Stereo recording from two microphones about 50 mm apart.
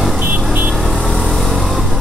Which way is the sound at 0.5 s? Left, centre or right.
Right.